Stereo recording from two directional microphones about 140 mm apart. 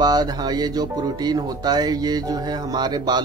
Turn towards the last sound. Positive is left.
turn(degrees=-30)  # may be behind; listen again after turning